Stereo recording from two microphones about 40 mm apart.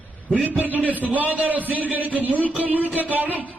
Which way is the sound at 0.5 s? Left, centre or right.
Right.